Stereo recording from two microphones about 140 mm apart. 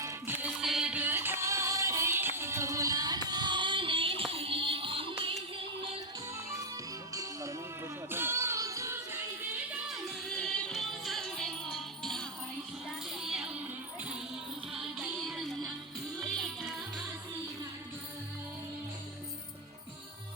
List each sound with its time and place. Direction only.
0.0 s music: 20° right (ahead or behind)
0.5 s music: centre (ahead or behind); by 5.3 s 40° right (ahead or behind)
7.1 s music: 25° right (ahead or behind)
8.1 s child singing: 15° right (ahead or behind)
9.5 s music: 10° right (ahead or behind)
10.2 s music: 5° left (ahead or behind)
14.7 s music: 5° right (ahead or behind)